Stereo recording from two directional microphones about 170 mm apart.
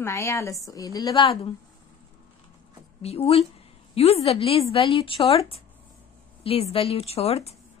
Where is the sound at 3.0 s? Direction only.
35° left (ahead or behind).